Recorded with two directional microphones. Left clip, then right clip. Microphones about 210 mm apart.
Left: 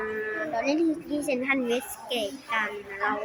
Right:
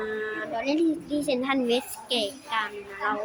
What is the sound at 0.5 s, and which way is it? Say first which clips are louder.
Child singing: left 1 dB; 5° right (ahead or behind).